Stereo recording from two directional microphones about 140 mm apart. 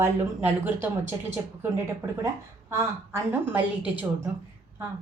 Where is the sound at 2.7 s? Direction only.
20° right (ahead or behind).